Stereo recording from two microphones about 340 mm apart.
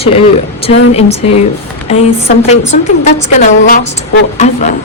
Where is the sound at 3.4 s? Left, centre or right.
Left.